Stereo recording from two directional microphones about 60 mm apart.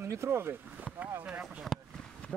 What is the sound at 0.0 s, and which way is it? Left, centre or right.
Speech, right.